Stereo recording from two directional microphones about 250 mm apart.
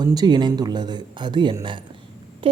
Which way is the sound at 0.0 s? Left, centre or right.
Centre.